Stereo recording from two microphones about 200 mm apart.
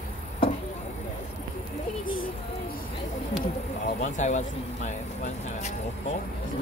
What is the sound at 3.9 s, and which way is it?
Speech, 40° left (ahead or behind).